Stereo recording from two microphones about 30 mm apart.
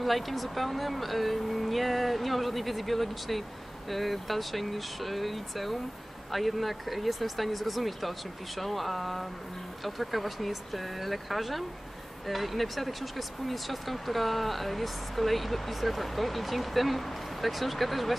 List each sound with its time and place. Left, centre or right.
0.0 s speech: centre